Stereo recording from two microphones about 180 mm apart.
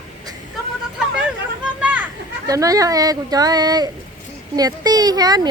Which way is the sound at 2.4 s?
20° right (ahead or behind).